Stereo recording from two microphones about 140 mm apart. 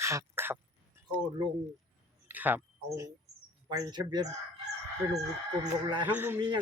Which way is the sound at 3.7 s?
30° right (ahead or behind).